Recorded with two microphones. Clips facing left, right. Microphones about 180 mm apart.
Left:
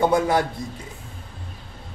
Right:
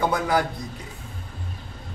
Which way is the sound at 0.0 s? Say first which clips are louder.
Left 4 dB; 25° left (ahead or behind).